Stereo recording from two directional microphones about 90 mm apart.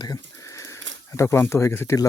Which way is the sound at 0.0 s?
40° left (ahead or behind).